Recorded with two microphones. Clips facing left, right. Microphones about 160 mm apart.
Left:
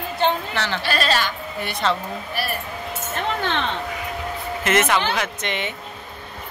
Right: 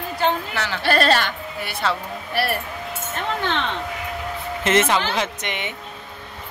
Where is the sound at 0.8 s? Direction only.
55° right (ahead or behind).